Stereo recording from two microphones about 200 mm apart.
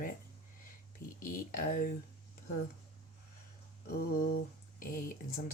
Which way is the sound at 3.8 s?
45° left (ahead or behind).